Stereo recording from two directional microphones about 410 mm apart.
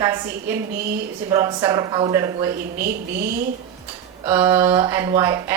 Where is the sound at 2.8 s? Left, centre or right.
Right.